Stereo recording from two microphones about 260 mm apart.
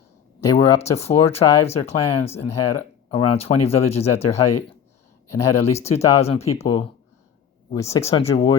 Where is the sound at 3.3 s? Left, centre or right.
Left.